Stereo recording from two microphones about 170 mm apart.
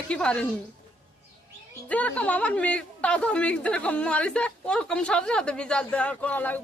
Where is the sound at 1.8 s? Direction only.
10° left (ahead or behind).